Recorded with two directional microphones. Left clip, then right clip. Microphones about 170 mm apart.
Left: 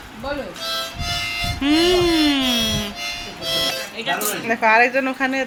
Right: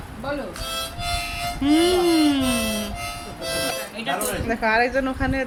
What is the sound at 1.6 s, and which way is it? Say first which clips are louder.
Music: left 2 dB; centre (ahead or behind).